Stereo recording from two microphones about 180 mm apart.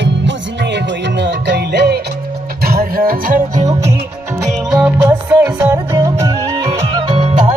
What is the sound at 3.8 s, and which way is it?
Music, 15° right (ahead or behind).